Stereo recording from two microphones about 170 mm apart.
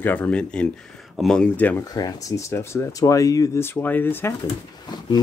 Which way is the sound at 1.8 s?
20° left (ahead or behind).